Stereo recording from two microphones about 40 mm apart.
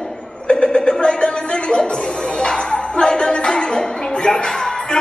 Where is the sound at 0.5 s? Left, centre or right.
Left.